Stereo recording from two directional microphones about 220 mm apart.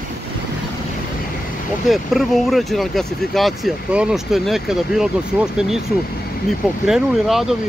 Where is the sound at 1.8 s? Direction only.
Centre (ahead or behind).